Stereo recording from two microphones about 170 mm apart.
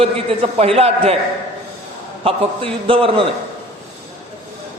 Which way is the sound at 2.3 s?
30° right (ahead or behind).